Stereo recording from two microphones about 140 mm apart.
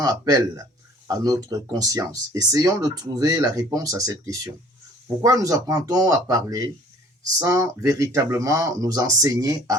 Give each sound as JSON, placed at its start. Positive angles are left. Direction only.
{"t": 0.0, "sound": "speech", "side_deg": -25}